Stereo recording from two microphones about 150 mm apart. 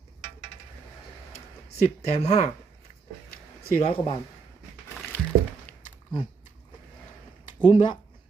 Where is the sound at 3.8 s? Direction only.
45° left (ahead or behind).